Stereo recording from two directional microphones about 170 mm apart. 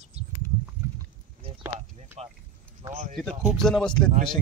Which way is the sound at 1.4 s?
35° right (ahead or behind).